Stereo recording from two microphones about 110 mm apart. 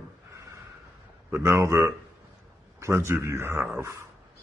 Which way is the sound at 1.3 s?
25° right (ahead or behind).